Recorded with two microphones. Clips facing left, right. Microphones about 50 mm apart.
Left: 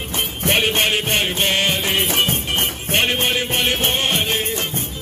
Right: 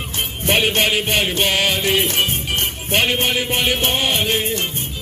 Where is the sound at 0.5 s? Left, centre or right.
Centre.